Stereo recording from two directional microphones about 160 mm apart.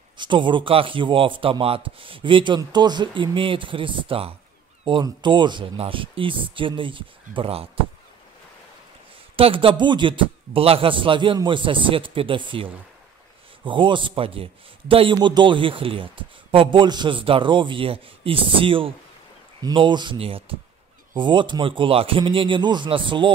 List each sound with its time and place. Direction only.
0.2 s a man's voice: 30° right (ahead or behind)
9.4 s a man's voice: 35° right (ahead or behind)